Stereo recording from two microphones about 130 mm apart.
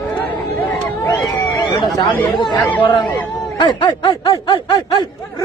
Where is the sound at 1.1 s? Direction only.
30° left (ahead or behind).